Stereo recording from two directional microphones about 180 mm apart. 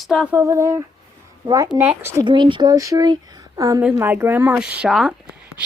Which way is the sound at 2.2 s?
25° right (ahead or behind).